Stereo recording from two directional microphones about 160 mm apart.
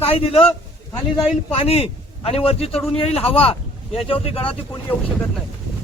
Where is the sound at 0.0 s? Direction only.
35° left (ahead or behind).